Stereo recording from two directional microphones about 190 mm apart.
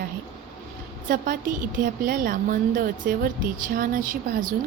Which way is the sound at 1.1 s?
45° right (ahead or behind).